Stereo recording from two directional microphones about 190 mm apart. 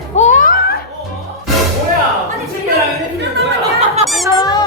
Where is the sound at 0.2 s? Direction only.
40° left (ahead or behind).